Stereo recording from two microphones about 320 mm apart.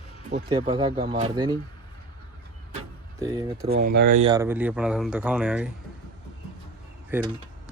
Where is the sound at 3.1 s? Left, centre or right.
Centre.